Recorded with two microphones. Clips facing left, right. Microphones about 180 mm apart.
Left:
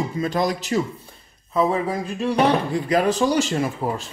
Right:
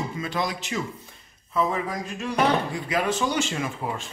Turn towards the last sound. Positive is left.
turn(degrees=40)  # may be behind; listen again after turning